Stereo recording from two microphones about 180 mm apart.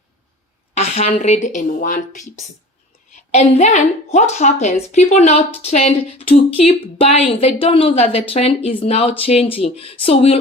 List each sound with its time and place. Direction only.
0.7 s a woman's voice: 35° left (ahead or behind)
3.3 s a woman's voice: 35° left (ahead or behind)